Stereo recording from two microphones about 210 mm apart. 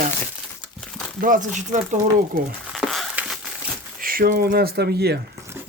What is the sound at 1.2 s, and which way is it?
Speech, 40° right (ahead or behind).